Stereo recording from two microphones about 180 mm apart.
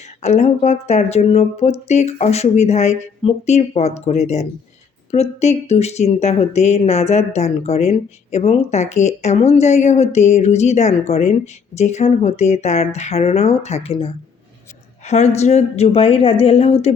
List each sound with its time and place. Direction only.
0.2 s speech: 40° left (ahead or behind)